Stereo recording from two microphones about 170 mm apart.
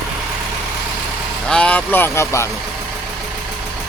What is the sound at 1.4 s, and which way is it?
Speech, 5° left (ahead or behind).